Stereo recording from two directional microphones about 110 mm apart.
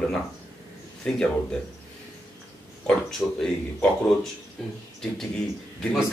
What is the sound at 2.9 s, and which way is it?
A man's voice, 5° left (ahead or behind).